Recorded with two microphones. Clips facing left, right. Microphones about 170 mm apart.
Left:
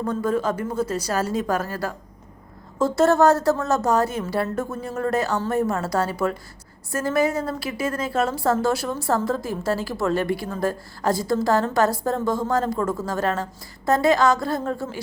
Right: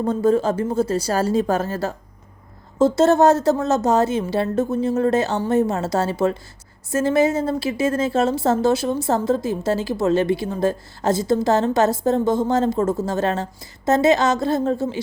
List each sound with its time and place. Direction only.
0.0 s a woman's voice: 25° right (ahead or behind)